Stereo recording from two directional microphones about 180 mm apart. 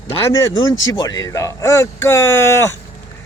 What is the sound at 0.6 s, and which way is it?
Speech, 90° left.